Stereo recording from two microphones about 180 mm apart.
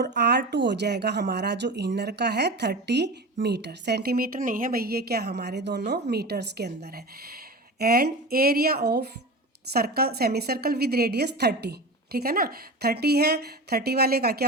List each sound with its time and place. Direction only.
0.2 s a woman's voice: 70° right (ahead or behind)